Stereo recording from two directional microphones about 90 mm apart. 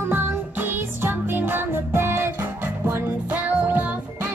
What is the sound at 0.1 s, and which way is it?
Music, 25° right (ahead or behind).